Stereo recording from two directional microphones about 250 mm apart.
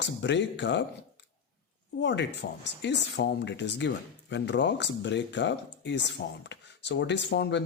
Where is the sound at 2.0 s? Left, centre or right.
Left.